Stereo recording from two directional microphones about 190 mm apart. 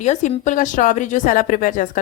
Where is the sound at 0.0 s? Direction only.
35° left (ahead or behind).